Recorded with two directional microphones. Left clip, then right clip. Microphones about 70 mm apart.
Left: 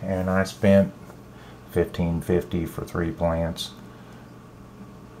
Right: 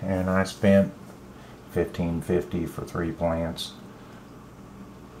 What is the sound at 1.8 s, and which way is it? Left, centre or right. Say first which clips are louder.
Speech: left 2 dB; left.